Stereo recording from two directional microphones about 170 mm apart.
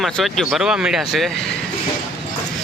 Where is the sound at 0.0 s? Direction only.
Centre (ahead or behind).